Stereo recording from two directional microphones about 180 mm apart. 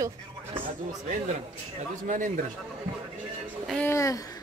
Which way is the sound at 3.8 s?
15° left (ahead or behind).